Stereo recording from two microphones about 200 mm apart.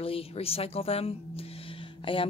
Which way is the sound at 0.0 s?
30° left (ahead or behind).